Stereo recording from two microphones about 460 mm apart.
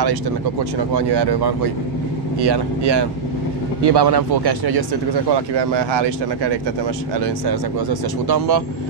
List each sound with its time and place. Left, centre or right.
0.0 s speech: right